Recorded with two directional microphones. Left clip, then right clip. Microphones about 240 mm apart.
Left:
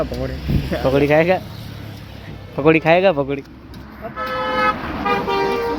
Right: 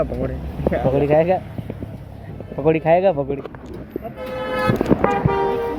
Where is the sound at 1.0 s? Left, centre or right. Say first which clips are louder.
Left 3 dB; centre.